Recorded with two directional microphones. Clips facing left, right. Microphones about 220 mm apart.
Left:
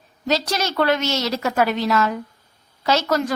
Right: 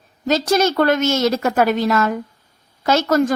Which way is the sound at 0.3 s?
50° right (ahead or behind).